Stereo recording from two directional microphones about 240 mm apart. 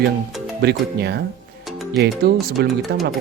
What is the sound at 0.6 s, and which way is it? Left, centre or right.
Speech, right.